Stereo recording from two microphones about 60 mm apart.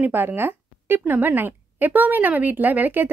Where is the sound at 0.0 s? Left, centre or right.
Right.